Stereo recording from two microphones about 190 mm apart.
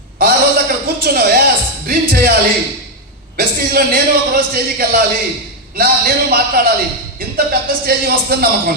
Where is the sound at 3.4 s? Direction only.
55° right (ahead or behind).